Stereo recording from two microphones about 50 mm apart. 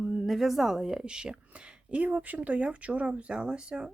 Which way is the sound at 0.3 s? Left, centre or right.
Centre.